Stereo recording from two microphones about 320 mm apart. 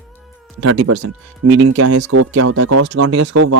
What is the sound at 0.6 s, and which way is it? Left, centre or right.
Speech, right.